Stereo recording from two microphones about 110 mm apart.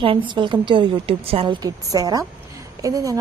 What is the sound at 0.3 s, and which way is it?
A woman's voice, 45° right (ahead or behind).